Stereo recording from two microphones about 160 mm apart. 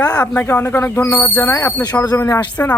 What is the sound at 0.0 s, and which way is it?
Speech, 10° left (ahead or behind).